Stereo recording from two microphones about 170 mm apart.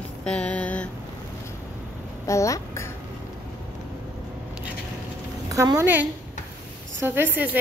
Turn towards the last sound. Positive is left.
turn(degrees=-10)  # may be behind; listen again after turning